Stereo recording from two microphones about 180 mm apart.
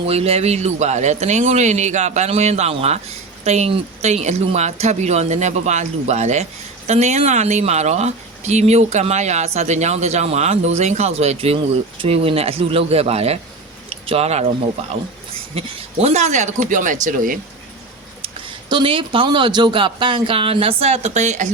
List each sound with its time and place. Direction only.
0.1 s speech: 35° right (ahead or behind)
15.5 s speech: 35° right (ahead or behind)
18.7 s speech: 30° right (ahead or behind)